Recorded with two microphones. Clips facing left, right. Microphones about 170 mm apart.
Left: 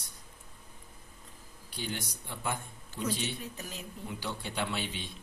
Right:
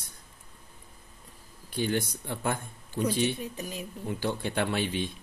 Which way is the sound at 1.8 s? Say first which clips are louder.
Right 10 dB; 55° right (ahead or behind).